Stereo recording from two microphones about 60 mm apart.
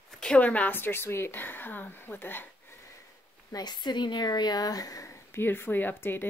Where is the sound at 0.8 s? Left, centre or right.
Left.